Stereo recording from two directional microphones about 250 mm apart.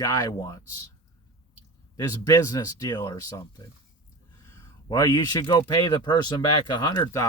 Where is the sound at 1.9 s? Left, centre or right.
Centre.